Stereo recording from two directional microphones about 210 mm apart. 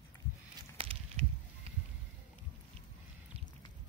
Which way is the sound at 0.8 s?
25° right (ahead or behind).